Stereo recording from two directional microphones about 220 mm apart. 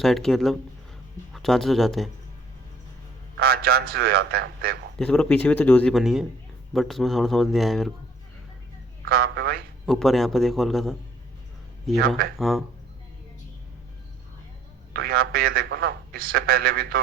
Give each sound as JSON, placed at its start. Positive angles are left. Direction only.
{"t": 0.0, "sound": "speech", "side_deg": 0}
{"t": 3.3, "sound": "a man's voice", "side_deg": -45}
{"t": 4.9, "sound": "speech", "side_deg": 5}
{"t": 9.0, "sound": "a man's voice", "side_deg": -45}
{"t": 9.8, "sound": "speech", "side_deg": 0}
{"t": 11.9, "sound": "a man's voice", "side_deg": -45}
{"t": 12.4, "sound": "speech", "side_deg": 0}
{"t": 14.9, "sound": "a man's voice", "side_deg": -45}